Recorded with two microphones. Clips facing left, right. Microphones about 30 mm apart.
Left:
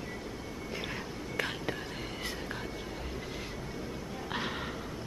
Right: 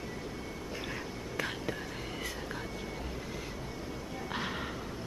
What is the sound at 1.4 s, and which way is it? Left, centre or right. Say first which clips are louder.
Whispering: left 2 dB; left.